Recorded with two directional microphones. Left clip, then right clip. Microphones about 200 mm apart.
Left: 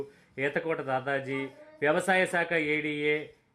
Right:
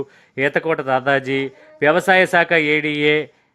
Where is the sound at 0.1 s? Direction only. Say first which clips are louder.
Right 12 dB; 30° right (ahead or behind).